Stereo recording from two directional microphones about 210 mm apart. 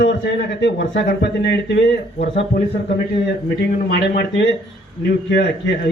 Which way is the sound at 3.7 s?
55° left (ahead or behind).